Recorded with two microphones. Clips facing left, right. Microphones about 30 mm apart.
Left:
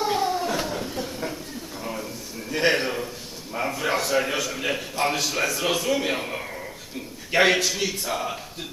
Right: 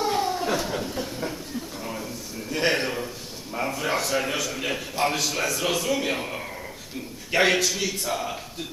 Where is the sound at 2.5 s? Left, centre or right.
Centre.